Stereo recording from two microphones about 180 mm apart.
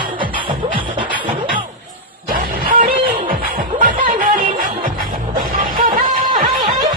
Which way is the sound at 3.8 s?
50° right (ahead or behind).